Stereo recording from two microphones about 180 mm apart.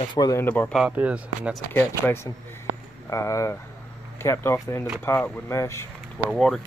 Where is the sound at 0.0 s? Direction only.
25° left (ahead or behind).